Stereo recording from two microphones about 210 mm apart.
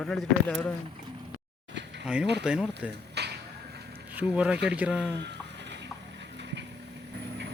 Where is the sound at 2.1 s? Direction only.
5° right (ahead or behind).